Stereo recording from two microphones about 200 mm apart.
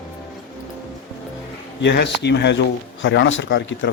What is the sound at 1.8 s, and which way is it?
Speech, 60° left (ahead or behind).